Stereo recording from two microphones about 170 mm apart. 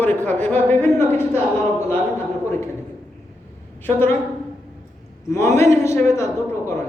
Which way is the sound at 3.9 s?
10° left (ahead or behind).